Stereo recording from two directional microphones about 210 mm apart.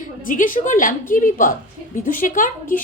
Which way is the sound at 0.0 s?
40° left (ahead or behind).